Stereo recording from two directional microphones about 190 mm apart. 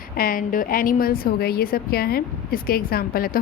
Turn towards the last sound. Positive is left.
turn(degrees=50)  # may be behind; listen again after turning